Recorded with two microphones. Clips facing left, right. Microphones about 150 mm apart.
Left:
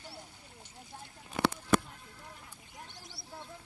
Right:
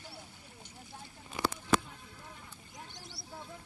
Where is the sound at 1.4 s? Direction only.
65° left (ahead or behind).